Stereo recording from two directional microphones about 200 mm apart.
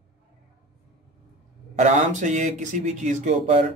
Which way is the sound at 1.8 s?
35° right (ahead or behind).